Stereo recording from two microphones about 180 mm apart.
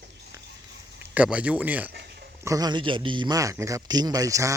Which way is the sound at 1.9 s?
65° right (ahead or behind).